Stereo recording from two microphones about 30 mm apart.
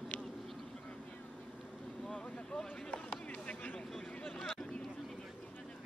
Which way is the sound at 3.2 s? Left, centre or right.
Left.